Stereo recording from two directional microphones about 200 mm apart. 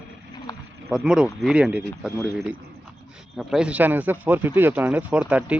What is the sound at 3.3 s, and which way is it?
Speech, 5° right (ahead or behind).